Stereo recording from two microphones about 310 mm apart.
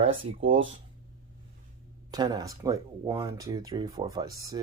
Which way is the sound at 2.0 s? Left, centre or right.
Centre.